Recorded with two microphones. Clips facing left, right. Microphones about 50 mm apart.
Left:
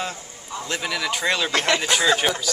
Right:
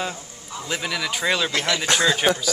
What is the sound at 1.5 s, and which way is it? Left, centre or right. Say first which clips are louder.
Speech: left 2 dB; left.